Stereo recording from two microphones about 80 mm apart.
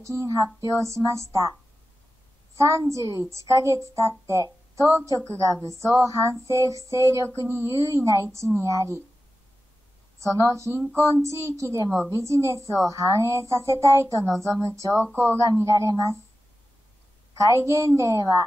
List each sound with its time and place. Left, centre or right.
0.0 s speech: right
2.5 s speech: right
10.2 s speech: right
17.4 s speech: right